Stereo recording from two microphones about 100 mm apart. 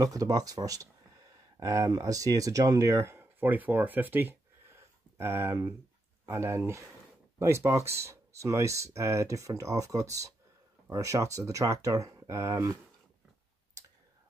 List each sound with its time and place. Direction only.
0.0 s speech: 40° right (ahead or behind)